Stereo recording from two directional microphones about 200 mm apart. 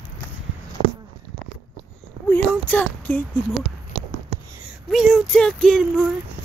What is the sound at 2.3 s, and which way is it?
Speech, 10° left (ahead or behind).